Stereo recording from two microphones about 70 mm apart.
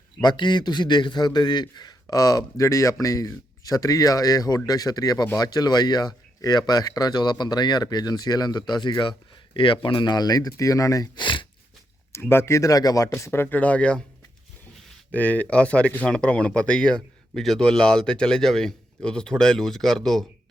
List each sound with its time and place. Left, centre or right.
0.2 s a man's voice: left
10.0 s a man's voice: left
12.1 s speech: left
13.4 s speech: left
15.1 s speech: left; by 20.2 s centre